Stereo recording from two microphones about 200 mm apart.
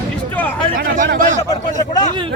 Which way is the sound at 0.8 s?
45° right (ahead or behind).